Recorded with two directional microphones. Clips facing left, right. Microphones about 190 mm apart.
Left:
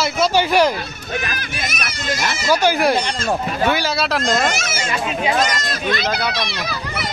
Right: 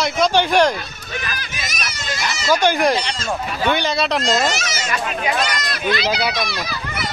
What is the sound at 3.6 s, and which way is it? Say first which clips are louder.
Speech: right 1 dB; centre (ahead or behind).